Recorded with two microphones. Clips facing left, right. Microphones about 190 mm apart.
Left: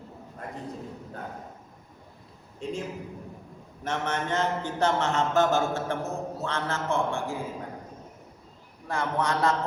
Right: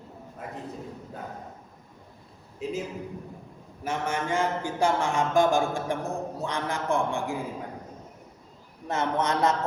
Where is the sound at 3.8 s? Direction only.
10° right (ahead or behind).